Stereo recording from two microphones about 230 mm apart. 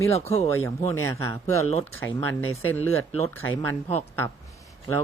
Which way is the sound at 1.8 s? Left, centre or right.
Centre.